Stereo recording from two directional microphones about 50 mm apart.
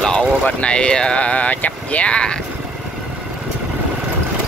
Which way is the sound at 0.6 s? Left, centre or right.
Left.